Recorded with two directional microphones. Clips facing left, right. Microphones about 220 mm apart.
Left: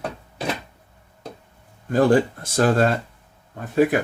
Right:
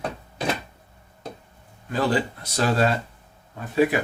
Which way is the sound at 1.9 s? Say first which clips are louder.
Left 7 dB; 50° left (ahead or behind).